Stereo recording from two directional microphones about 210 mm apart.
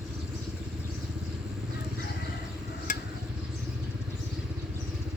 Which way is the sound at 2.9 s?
40° left (ahead or behind).